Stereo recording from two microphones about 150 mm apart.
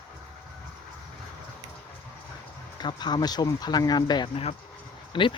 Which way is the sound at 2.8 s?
30° left (ahead or behind).